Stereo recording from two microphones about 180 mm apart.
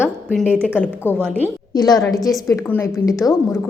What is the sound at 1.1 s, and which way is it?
Speech, 5° left (ahead or behind).